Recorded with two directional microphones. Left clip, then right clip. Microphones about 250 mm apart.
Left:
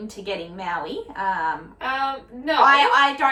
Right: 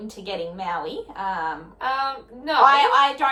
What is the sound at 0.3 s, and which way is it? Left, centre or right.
A woman's voice, centre.